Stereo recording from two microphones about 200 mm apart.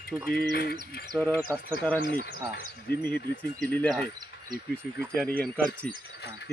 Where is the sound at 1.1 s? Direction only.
5° left (ahead or behind).